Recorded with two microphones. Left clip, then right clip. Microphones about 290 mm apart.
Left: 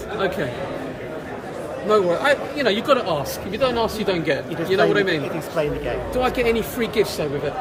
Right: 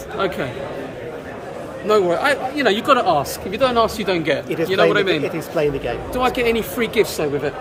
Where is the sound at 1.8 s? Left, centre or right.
Centre.